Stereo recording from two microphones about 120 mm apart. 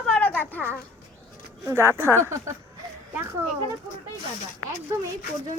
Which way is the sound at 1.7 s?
20° right (ahead or behind).